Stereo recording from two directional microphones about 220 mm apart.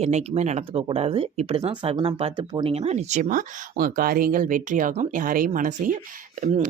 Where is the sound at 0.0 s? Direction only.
30° right (ahead or behind).